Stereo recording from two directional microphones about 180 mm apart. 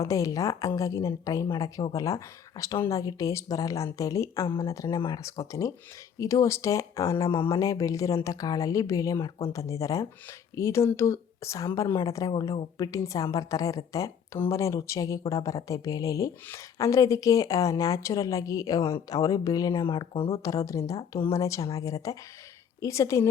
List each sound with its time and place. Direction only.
0.0 s speech: 20° left (ahead or behind)
4.9 s speech: 30° left (ahead or behind)
5.2 s speech: 20° left (ahead or behind)
20.4 s speech: 20° left (ahead or behind)